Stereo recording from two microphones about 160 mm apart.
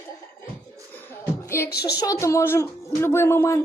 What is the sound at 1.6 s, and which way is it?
Speech, 90° left.